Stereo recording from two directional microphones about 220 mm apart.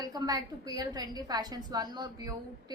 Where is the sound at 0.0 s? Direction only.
15° right (ahead or behind).